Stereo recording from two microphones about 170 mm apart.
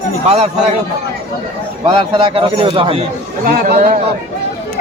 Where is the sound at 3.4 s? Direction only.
60° right (ahead or behind).